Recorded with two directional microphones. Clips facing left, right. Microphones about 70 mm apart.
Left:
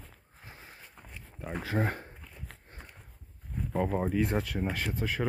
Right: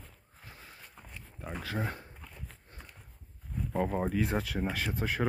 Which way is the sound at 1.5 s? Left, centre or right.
Left.